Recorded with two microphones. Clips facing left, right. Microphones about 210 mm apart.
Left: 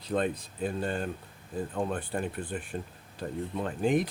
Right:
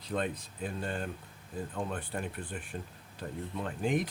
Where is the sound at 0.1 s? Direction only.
35° left (ahead or behind).